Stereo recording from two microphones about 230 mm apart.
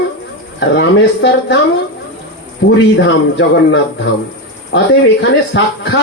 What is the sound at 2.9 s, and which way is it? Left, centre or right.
Speech, left.